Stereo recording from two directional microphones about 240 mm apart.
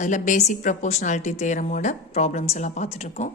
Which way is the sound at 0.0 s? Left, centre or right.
Left.